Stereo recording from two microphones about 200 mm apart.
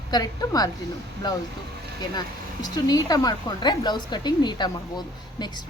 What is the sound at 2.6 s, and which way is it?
Speech, 20° left (ahead or behind).